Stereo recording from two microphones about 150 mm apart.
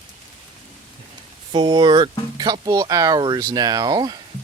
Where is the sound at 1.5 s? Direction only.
30° right (ahead or behind).